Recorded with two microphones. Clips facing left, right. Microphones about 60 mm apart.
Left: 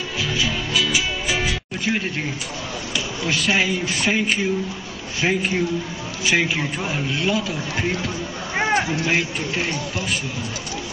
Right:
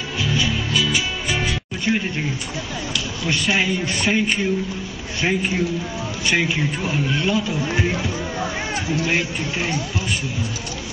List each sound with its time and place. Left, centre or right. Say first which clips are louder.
0.2 s music: right 2 dB; centre
3.3 s speech: even; centre
8.5 s a sound: left 6 dB; left
9.0 s speech: even; centre